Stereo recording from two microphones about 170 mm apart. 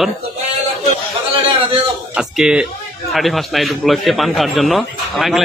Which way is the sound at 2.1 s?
5° right (ahead or behind).